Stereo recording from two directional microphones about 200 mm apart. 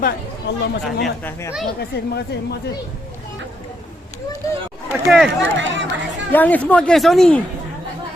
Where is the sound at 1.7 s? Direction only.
55° left (ahead or behind).